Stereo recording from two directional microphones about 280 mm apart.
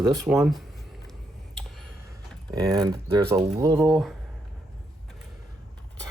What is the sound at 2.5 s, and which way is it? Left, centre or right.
Speech, centre.